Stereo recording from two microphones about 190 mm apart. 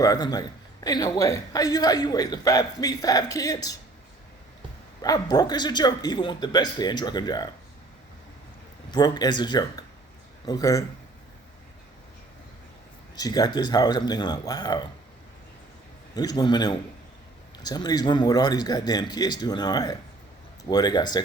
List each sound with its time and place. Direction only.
0.0 s a man's voice: 20° left (ahead or behind)
5.0 s a man's voice: 20° left (ahead or behind)
8.9 s a man's voice: 20° left (ahead or behind)
13.1 s a man's voice: 20° left (ahead or behind)
16.1 s a man's voice: 20° left (ahead or behind)